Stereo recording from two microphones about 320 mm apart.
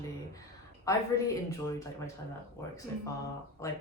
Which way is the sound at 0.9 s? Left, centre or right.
Centre.